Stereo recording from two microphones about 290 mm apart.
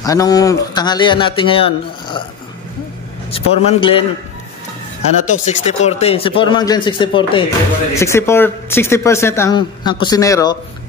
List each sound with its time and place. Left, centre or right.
0.0 s speech: centre
3.3 s a man's voice: centre
5.2 s speech: left